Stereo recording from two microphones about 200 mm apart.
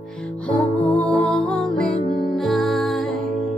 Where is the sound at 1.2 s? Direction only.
5° left (ahead or behind).